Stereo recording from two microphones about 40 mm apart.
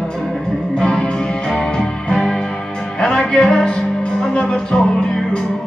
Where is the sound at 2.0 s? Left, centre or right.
Centre.